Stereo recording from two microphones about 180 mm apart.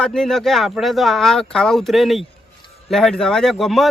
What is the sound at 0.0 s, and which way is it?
Speech, 5° left (ahead or behind).